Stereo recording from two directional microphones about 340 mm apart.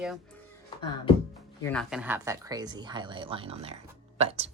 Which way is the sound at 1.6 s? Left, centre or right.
Centre.